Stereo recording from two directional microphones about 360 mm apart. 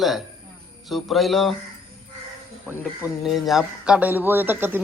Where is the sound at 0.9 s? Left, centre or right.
Centre.